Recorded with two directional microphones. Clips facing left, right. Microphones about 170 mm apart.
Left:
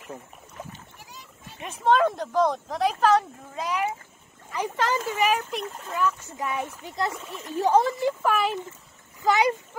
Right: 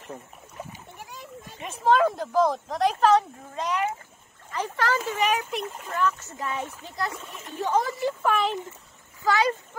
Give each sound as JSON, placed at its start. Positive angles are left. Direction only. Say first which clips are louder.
{"t": 1.6, "sound": "speech", "louder": "even", "side_deg": 0}
{"t": 5.4, "sound": "speech", "louder": "right 1 dB", "side_deg": -5}
{"t": 5.9, "sound": "speech", "louder": "even", "side_deg": 10}
{"t": 7.5, "sound": "speech", "louder": "left 4 dB", "side_deg": 35}
{"t": 7.9, "sound": "speech", "louder": "left 1 dB", "side_deg": 5}
{"t": 9.2, "sound": "speech", "louder": "left 2 dB", "side_deg": 20}